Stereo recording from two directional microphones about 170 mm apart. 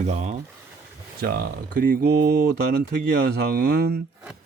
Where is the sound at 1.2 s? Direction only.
60° right (ahead or behind).